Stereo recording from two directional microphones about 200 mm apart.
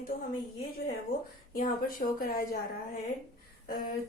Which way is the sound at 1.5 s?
45° left (ahead or behind).